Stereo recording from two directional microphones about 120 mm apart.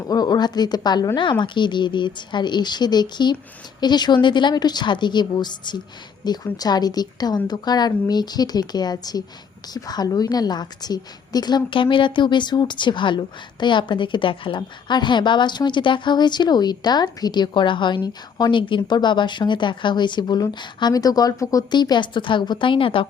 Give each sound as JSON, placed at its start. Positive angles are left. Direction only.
{"t": 0.0, "sound": "a woman's voice", "side_deg": 35}